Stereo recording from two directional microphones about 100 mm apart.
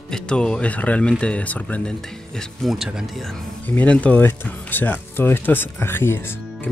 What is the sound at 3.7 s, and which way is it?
Speech, 15° left (ahead or behind).